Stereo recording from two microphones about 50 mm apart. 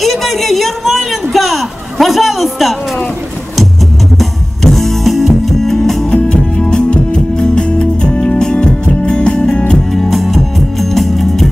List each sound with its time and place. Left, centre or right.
0.0 s a sound: centre
4.2 s music: centre
9.9 s music: centre